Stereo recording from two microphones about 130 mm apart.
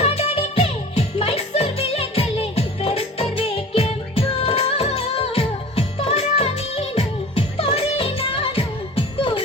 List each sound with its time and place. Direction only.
0.0 s music: 50° left (ahead or behind)